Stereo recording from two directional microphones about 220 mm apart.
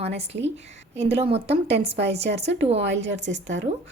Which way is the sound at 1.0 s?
25° right (ahead or behind).